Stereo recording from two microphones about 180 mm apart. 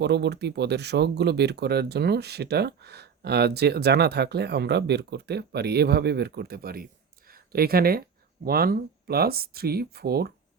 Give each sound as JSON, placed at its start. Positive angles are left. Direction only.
{"t": 0.0, "sound": "speech", "side_deg": -70}